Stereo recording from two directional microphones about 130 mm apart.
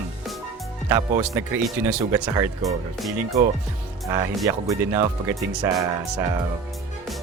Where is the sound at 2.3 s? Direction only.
25° right (ahead or behind).